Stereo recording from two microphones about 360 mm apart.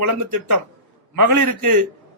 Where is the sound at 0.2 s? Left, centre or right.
Right.